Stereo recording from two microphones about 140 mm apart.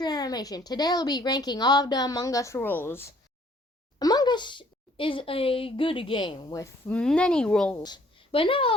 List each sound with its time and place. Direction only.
0.0 s a woman's voice: 30° left (ahead or behind)
3.9 s speech: 30° left (ahead or behind)
6.8 s speech: 5° left (ahead or behind)
7.8 s a woman's voice: 30° left (ahead or behind)